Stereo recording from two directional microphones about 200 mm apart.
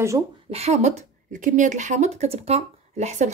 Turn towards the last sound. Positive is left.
turn(degrees=-35)  # may be behind; listen again after turning